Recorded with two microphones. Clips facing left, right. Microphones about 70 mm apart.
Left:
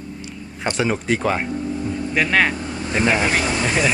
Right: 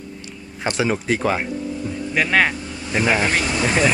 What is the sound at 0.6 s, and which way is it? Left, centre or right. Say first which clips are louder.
Speech: even; centre.